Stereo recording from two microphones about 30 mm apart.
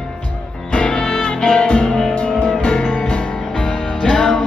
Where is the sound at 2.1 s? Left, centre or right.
Left.